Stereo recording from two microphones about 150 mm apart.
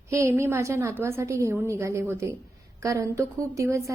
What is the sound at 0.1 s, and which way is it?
A woman's voice, 20° right (ahead or behind).